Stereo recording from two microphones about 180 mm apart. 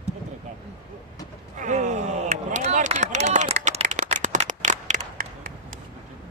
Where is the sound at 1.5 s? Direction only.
45° right (ahead or behind).